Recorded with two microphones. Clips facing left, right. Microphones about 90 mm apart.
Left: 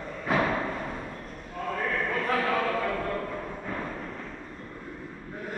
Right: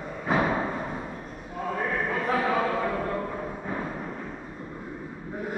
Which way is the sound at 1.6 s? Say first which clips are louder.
Right 1 dB; 15° right (ahead or behind).